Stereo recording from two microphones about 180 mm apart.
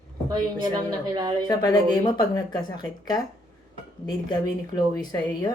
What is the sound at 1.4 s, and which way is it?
Speech, 20° left (ahead or behind).